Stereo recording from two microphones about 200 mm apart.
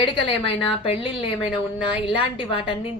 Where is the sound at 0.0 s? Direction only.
25° left (ahead or behind).